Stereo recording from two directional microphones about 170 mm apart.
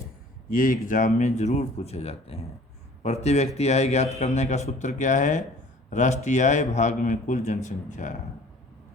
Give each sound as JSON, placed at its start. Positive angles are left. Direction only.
{"t": 0.5, "sound": "a man's voice", "side_deg": 55}